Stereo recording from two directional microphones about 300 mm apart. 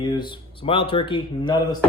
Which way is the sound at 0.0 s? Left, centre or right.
Centre.